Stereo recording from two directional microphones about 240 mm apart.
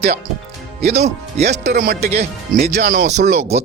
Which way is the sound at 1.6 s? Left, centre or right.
Right.